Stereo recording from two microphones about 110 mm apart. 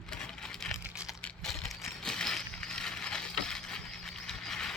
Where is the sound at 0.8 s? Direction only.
10° right (ahead or behind).